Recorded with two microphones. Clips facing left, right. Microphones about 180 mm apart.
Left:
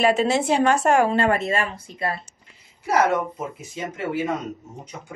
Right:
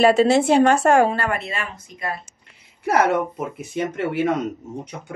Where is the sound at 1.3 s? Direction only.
40° left (ahead or behind).